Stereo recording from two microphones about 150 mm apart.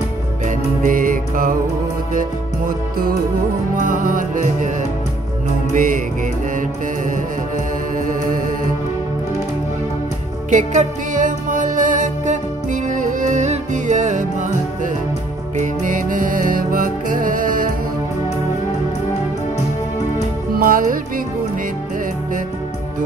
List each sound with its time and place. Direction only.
0.5 s music: 60° right (ahead or behind)
3.7 s music: 60° right (ahead or behind)
5.7 s music: 60° right (ahead or behind)
10.5 s music: 55° right (ahead or behind)
15.5 s music: 60° right (ahead or behind)
20.5 s music: 70° right (ahead or behind)